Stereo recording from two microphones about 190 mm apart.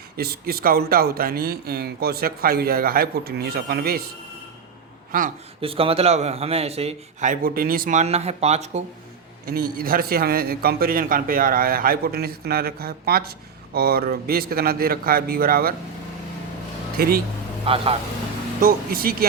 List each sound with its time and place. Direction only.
0.2 s speech: 55° right (ahead or behind)
5.5 s a man's voice: 30° right (ahead or behind)
9.5 s speech: 50° right (ahead or behind)
17.0 s speech: 50° right (ahead or behind)
17.7 s speech: 30° right (ahead or behind)
18.6 s speech: 50° right (ahead or behind)